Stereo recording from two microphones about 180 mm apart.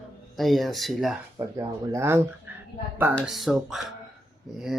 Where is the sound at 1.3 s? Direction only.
15° right (ahead or behind).